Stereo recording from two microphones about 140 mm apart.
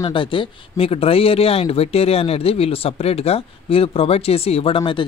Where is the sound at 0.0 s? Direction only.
35° left (ahead or behind).